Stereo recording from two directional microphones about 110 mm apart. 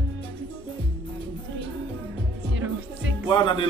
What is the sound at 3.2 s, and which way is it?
Speech, 50° left (ahead or behind).